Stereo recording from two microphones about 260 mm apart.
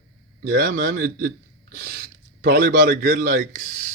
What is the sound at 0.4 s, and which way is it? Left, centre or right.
A man's voice, right.